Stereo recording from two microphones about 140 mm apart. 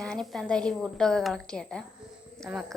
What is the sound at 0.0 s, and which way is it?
A woman's voice, 5° left (ahead or behind).